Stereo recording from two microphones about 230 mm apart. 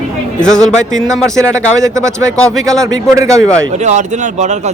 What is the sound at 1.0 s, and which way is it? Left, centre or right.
Speech, centre.